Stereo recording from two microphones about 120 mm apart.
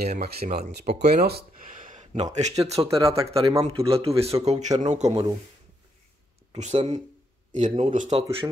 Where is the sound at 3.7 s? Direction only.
50° right (ahead or behind).